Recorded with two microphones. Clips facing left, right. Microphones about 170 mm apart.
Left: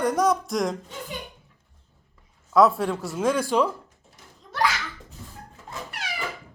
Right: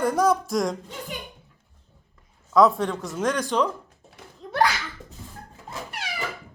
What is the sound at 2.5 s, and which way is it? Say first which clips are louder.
Speech: even; 5° left (ahead or behind).